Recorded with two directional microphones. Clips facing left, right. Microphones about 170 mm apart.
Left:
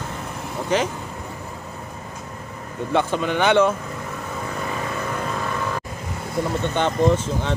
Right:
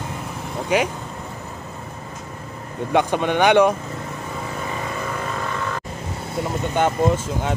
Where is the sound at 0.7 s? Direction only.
10° right (ahead or behind).